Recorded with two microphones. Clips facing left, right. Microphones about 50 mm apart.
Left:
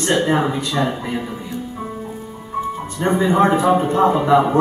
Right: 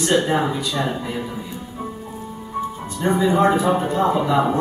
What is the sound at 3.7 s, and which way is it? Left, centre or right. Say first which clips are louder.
Speech: left 4 dB; centre.